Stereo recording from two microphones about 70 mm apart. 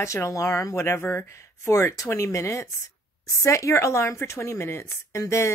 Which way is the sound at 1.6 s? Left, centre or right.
Left.